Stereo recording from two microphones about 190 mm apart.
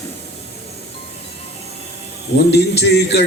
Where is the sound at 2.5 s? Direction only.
60° left (ahead or behind).